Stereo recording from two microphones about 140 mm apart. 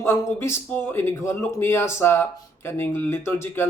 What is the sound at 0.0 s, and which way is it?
A man's voice, 20° left (ahead or behind).